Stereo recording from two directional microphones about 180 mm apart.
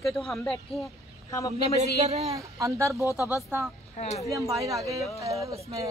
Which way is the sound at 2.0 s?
35° right (ahead or behind).